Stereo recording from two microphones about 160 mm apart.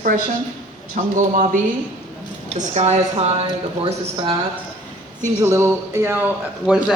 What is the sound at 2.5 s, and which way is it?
Speech, 45° right (ahead or behind).